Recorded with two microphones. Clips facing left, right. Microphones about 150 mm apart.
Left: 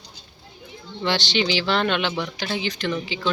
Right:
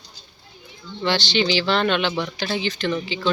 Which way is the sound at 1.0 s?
15° left (ahead or behind).